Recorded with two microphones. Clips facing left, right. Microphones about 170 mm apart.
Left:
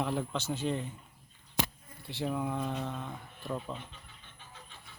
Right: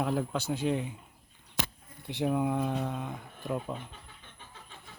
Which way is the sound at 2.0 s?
15° right (ahead or behind).